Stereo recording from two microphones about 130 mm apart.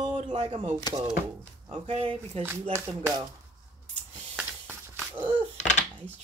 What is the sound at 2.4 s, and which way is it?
Speech, 15° right (ahead or behind).